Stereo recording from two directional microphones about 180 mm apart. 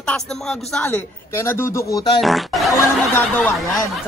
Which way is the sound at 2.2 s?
Centre (ahead or behind).